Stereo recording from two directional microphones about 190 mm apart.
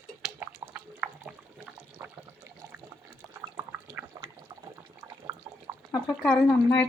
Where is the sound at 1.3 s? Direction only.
10° right (ahead or behind).